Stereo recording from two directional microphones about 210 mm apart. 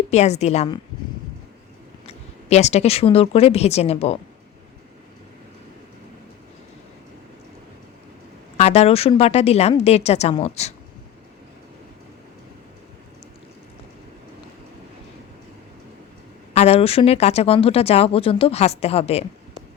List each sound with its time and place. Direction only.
0.1 s a woman's voice: 30° left (ahead or behind)
2.0 s speech: 30° left (ahead or behind)
8.5 s a woman's voice: 30° left (ahead or behind)
16.6 s speech: 30° left (ahead or behind)